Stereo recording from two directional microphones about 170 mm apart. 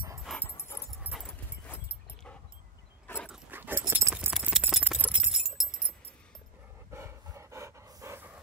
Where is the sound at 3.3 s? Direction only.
10° right (ahead or behind).